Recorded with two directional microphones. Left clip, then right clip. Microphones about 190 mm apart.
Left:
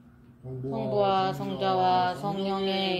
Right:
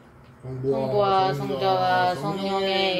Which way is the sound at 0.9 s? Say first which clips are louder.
Right 3 dB; 50° left (ahead or behind).